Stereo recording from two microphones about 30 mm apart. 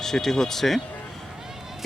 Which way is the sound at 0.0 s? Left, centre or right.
Centre.